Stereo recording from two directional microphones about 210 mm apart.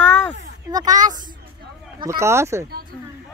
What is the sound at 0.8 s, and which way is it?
Speech, 35° right (ahead or behind).